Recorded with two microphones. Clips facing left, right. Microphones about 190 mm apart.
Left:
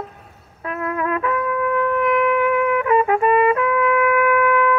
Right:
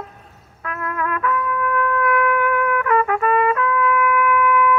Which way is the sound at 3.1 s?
30° left (ahead or behind).